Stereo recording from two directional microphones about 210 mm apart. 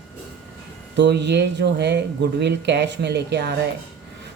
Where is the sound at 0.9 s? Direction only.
55° right (ahead or behind).